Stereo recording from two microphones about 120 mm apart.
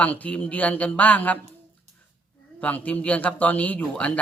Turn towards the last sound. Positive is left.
turn(degrees=10)  # may be behind; listen again after turning